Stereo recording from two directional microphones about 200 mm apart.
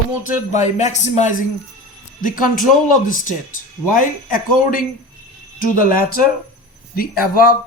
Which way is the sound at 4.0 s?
45° left (ahead or behind).